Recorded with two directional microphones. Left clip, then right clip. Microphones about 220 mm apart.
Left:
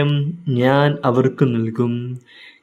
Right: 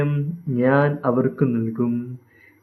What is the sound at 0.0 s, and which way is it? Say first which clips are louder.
A man's voice: left 4 dB; 45° left (ahead or behind).